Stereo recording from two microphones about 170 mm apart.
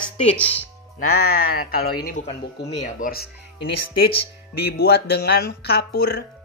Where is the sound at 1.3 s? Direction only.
65° left (ahead or behind).